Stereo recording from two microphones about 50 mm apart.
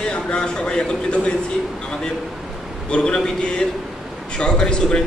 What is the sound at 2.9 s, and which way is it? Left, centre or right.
Speech, centre.